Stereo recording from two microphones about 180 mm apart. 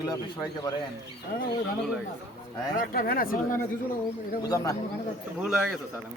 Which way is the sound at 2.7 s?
50° left (ahead or behind).